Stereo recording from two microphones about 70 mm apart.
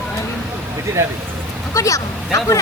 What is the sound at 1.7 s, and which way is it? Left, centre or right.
Speech, left.